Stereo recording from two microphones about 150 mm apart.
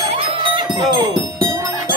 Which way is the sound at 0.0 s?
35° right (ahead or behind).